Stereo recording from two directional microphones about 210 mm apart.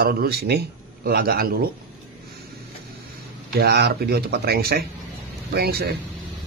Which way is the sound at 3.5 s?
50° right (ahead or behind).